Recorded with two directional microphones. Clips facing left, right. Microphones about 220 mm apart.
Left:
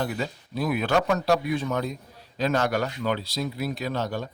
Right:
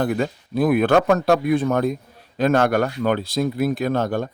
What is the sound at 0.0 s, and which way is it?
A man's voice, 55° right (ahead or behind).